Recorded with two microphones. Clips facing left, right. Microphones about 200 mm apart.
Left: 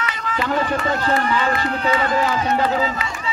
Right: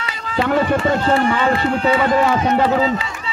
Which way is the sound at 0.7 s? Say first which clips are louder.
Right 4 dB; 30° right (ahead or behind).